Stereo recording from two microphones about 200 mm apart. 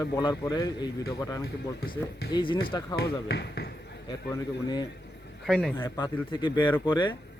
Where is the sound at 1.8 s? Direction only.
50° left (ahead or behind).